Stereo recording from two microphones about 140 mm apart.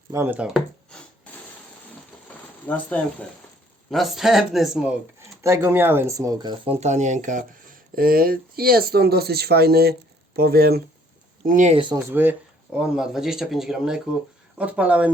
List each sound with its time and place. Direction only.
0.1 s speech: 15° right (ahead or behind)
0.5 s a sound: 5° left (ahead or behind)
2.6 s speech: 10° left (ahead or behind)
3.8 s speech: centre (ahead or behind)
5.4 s speech: 20° right (ahead or behind)
6.7 s speech: 55° right (ahead or behind)
7.9 s speech: 90° right
11.4 s speech: 65° right (ahead or behind)
11.7 s speech: 35° right (ahead or behind)
11.9 s speech: 15° right (ahead or behind)